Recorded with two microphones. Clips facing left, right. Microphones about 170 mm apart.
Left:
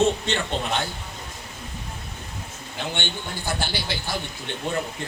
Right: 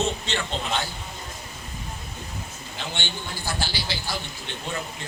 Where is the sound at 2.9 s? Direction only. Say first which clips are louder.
Left 3 dB; 55° left (ahead or behind).